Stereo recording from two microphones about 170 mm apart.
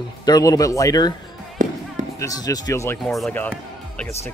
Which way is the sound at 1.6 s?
50° right (ahead or behind).